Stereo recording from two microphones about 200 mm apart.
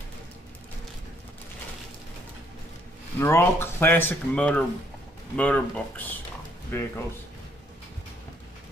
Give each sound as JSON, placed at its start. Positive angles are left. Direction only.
{"t": 3.2, "sound": "speech", "side_deg": 10}